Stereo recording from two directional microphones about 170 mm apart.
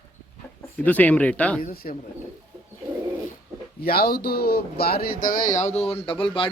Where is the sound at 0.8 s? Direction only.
10° left (ahead or behind).